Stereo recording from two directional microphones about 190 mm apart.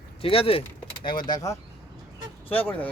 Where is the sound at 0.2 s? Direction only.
30° left (ahead or behind).